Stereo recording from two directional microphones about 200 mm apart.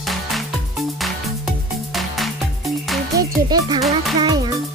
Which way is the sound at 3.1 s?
20° right (ahead or behind).